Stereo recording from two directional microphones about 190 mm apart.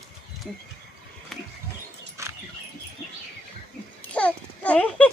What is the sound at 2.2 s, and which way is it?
Dog, 15° right (ahead or behind).